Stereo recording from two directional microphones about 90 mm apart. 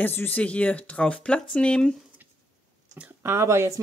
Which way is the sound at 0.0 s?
20° left (ahead or behind).